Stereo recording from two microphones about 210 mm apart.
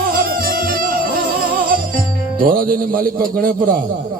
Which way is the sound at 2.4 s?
45° right (ahead or behind).